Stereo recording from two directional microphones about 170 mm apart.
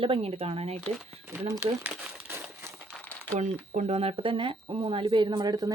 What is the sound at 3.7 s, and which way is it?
Speech, 40° right (ahead or behind).